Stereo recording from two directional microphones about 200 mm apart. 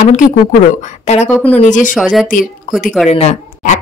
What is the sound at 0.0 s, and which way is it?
A woman's voice, 40° left (ahead or behind).